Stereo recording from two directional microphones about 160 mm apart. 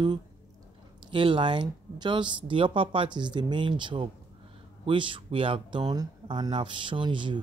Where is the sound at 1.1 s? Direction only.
30° right (ahead or behind).